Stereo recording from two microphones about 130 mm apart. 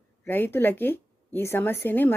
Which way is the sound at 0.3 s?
15° left (ahead or behind).